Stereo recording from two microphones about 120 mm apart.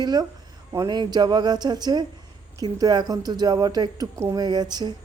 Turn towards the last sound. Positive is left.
turn(degrees=-35)  # may be behind; listen again after turning